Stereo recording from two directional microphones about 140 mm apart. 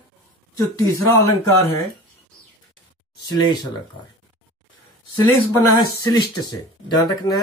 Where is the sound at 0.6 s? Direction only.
20° left (ahead or behind).